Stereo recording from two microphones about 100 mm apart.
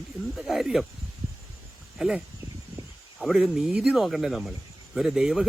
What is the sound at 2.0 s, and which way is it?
Speech, 5° right (ahead or behind).